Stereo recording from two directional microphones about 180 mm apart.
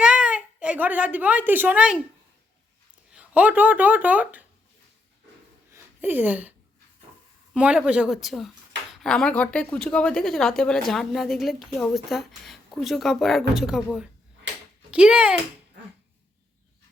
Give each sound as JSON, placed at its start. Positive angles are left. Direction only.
{"t": 0.0, "sound": "a woman's voice", "side_deg": -5}
{"t": 3.1, "sound": "speech", "side_deg": -5}
{"t": 5.7, "sound": "a sound", "side_deg": -10}
{"t": 7.5, "sound": "a woman's voice", "side_deg": -5}